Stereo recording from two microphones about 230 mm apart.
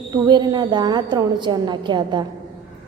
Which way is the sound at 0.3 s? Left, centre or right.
Centre.